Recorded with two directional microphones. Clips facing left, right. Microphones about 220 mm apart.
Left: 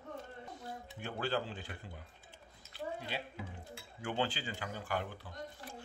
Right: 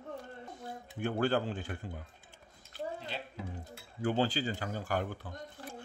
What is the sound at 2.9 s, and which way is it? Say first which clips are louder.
Speech: even; 15° left (ahead or behind).